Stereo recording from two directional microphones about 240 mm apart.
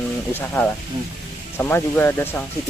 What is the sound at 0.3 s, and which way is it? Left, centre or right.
Speech, centre.